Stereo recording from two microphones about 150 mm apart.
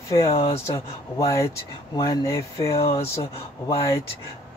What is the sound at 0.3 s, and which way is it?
Speech, 40° left (ahead or behind).